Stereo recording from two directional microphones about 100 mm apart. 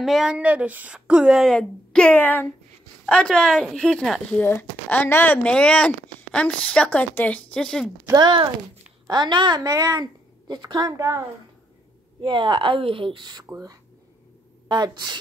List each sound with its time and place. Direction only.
0.0 s speech: 5° right (ahead or behind)
1.5 s speech: 10° left (ahead or behind)
4.4 s speech: 20° left (ahead or behind)
8.1 s a woman's voice: 45° right (ahead or behind)
10.5 s a woman's voice: 45° right (ahead or behind)
11.0 s a woman's voice: 30° right (ahead or behind)
12.2 s speech: 50° right (ahead or behind)
14.7 s a woman's voice: 45° right (ahead or behind)